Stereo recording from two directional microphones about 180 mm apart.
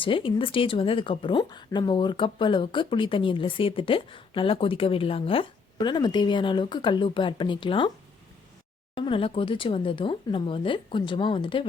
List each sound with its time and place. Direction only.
0.0 s speech: 30° left (ahead or behind)
9.0 s speech: 30° left (ahead or behind)